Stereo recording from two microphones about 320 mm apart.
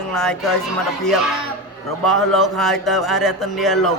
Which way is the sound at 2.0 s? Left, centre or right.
Centre.